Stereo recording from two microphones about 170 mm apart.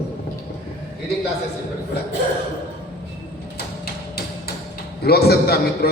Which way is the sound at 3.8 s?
65° left (ahead or behind).